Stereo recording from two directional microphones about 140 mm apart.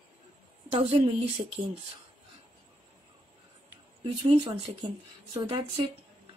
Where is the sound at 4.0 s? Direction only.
35° right (ahead or behind).